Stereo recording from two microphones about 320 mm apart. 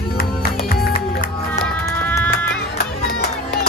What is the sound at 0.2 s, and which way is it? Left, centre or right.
Music, left.